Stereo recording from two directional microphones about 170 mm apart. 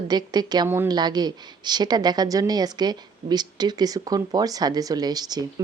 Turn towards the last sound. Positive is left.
turn(degrees=-25)  # may be behind; listen again after turning